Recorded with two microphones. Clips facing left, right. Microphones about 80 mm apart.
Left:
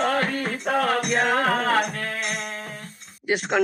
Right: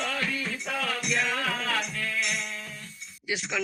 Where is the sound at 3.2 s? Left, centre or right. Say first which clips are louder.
Left 8 dB; left.